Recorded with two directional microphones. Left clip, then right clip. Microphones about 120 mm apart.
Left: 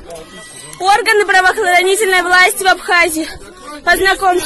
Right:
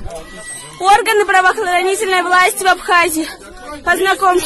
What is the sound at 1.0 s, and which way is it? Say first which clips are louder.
Speech: left 2 dB; centre (ahead or behind).